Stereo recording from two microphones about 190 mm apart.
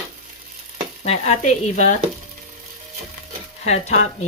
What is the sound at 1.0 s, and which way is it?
Speech, 35° left (ahead or behind).